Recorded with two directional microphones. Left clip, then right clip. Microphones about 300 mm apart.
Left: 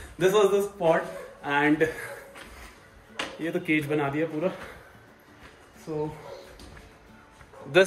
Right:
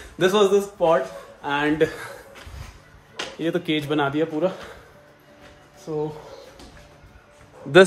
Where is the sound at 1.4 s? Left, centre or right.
Centre.